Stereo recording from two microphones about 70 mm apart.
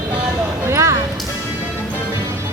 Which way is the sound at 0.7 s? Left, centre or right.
Right.